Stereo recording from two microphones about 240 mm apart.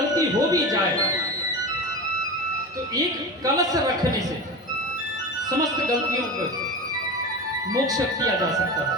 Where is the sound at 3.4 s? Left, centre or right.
Centre.